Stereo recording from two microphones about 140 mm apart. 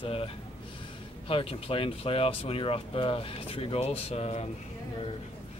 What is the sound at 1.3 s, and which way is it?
Speech, 40° left (ahead or behind).